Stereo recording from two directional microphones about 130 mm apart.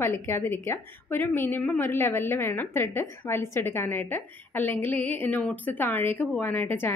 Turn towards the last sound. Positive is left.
turn(degrees=15)  # may be behind; listen again after turning